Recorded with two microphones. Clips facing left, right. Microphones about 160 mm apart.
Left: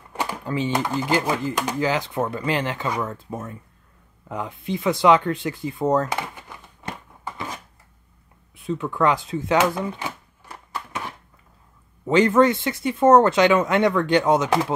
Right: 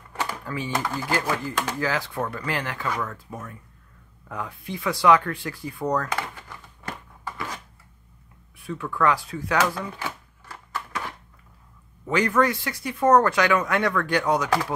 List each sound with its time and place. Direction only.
0.1 s speech: 20° left (ahead or behind)
4.3 s a sound: 20° left (ahead or behind)
12.1 s speech: 25° left (ahead or behind)